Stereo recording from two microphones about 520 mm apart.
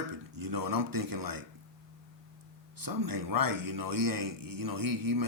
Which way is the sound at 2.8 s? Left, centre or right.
Right.